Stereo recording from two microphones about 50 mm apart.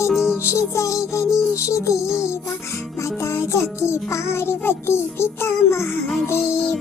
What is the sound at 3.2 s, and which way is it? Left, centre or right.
Music, left.